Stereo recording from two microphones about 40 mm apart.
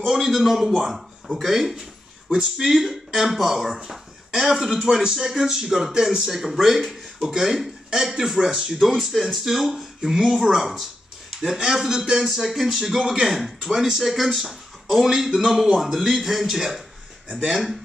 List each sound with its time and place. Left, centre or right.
0.1 s speech: centre
12.8 s speech: centre